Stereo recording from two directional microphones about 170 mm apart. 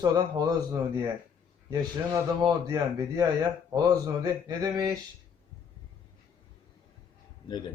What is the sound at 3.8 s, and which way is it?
A man's voice, 20° right (ahead or behind).